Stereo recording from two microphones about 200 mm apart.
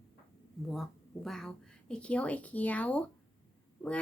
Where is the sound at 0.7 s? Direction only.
Centre (ahead or behind).